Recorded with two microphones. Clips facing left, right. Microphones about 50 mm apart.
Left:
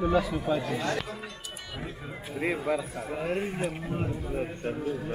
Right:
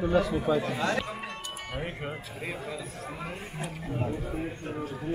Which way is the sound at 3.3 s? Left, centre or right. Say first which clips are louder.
Left 8 dB; left.